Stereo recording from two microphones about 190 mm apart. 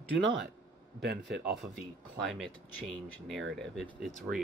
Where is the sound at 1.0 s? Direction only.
55° right (ahead or behind).